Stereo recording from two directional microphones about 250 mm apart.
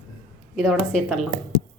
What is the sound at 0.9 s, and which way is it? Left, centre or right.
Speech, centre.